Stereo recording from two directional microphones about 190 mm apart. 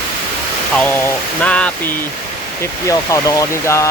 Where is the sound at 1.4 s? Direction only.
5° left (ahead or behind).